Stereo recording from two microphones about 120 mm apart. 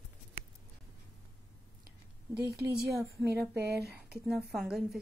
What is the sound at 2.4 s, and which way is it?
Speech, 25° right (ahead or behind).